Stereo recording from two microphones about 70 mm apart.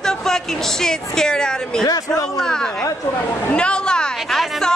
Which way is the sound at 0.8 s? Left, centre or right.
Centre.